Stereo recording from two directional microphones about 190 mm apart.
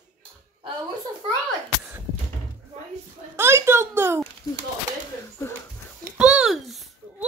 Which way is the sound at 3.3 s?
15° right (ahead or behind).